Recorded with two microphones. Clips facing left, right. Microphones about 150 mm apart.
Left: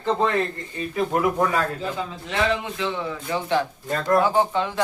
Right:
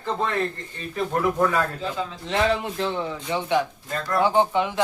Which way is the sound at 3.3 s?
15° right (ahead or behind).